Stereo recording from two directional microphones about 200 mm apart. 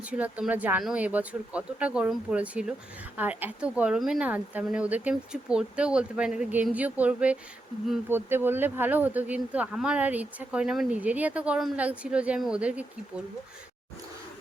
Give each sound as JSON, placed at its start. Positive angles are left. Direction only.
{"t": 0.0, "sound": "a woman's voice", "side_deg": -5}